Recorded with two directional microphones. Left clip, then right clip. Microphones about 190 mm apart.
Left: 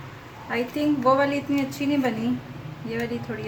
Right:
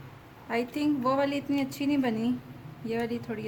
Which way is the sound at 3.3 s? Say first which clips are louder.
Left 4 dB; 50° right (ahead or behind).